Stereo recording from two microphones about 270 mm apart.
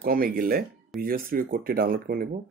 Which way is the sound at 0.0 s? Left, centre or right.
Right.